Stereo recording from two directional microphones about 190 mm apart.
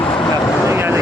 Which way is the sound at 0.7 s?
10° right (ahead or behind).